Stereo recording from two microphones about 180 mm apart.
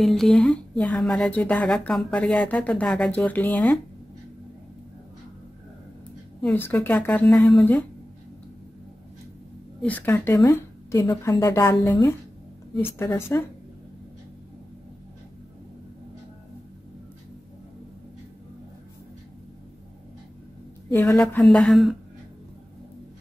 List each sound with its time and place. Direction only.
0.0 s speech: 5° left (ahead or behind)
6.4 s a woman's voice: 10° left (ahead or behind)
9.8 s a woman's voice: 10° left (ahead or behind)
20.9 s a woman's voice: 15° left (ahead or behind)
21.2 s speech: 5° left (ahead or behind)